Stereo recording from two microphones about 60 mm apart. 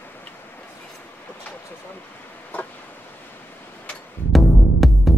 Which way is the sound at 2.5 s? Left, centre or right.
Left.